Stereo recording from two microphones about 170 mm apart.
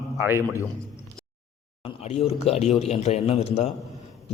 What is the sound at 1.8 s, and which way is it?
A man's voice, 35° left (ahead or behind).